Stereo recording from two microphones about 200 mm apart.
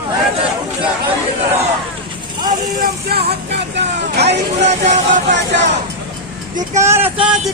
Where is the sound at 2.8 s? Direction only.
55° right (ahead or behind).